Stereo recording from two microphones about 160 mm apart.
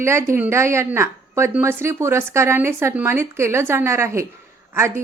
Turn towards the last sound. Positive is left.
turn(degrees=-15)  # may be behind; listen again after turning